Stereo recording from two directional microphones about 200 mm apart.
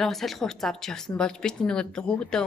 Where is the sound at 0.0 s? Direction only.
Centre (ahead or behind).